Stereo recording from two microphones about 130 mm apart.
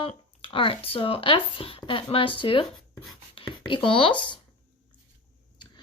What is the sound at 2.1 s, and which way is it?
Speech, 40° left (ahead or behind).